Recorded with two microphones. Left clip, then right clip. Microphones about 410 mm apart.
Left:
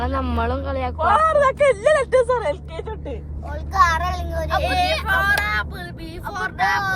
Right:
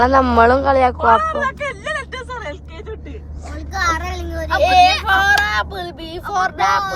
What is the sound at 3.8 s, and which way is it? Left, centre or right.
Speech, centre.